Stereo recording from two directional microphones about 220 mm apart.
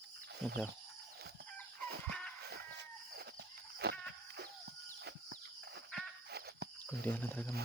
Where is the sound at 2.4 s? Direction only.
45° right (ahead or behind).